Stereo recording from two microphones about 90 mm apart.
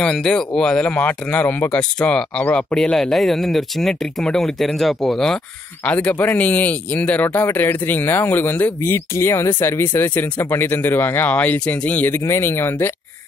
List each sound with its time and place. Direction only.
0.0 s speech: 10° left (ahead or behind)
5.9 s speech: 15° left (ahead or behind)